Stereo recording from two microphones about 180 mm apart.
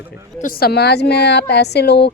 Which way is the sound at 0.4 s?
60° left (ahead or behind).